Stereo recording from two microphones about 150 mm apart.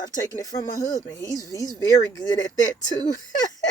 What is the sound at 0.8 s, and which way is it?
Speech, 25° left (ahead or behind).